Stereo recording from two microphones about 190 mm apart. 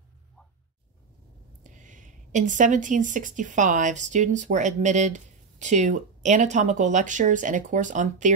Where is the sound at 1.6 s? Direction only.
40° right (ahead or behind).